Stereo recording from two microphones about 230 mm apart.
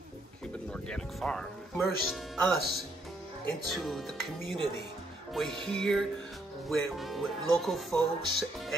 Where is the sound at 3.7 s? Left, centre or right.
Centre.